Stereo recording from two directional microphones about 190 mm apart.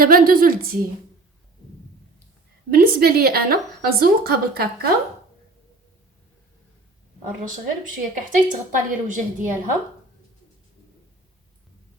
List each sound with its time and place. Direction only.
0.0 s a woman's voice: 50° right (ahead or behind)
2.6 s a woman's voice: 55° right (ahead or behind)
7.4 s a woman's voice: 45° right (ahead or behind)